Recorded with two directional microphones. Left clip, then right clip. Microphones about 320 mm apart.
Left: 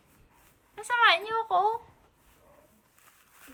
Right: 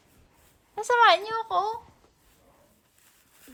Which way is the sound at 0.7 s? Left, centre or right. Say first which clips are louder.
Right 3 dB; centre.